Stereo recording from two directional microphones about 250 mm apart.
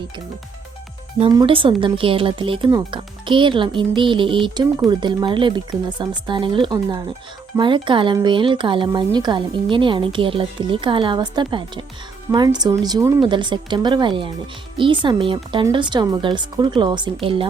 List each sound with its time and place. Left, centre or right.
1.2 s speech: right